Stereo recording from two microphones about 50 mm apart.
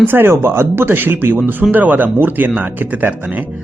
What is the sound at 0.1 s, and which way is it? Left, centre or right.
Speech, right.